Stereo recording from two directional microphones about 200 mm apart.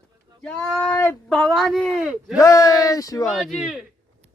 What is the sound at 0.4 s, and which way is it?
Speech, 5° left (ahead or behind).